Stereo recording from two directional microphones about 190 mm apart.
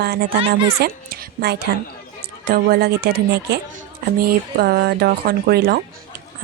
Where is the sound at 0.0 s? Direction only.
55° right (ahead or behind).